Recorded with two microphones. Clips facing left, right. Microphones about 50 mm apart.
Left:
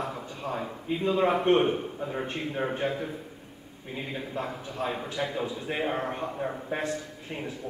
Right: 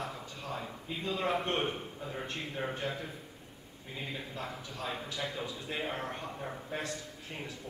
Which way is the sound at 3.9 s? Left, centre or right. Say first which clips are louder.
Left 7 dB; left.